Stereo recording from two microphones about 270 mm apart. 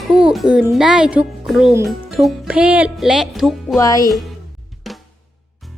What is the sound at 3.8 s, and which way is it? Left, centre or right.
Speech, centre.